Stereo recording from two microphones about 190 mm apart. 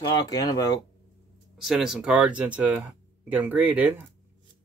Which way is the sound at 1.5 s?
Centre (ahead or behind).